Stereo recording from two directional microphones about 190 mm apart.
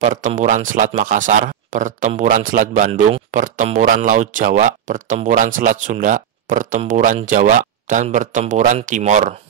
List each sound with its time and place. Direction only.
0.0 s speech: 40° right (ahead or behind)